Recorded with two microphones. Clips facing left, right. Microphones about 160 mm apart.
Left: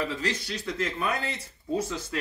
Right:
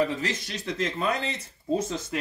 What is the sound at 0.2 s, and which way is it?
Speech, 20° right (ahead or behind).